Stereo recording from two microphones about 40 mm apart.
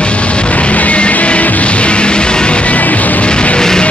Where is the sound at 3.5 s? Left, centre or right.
Centre.